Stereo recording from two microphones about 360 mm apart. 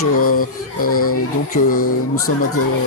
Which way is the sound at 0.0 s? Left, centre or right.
Left.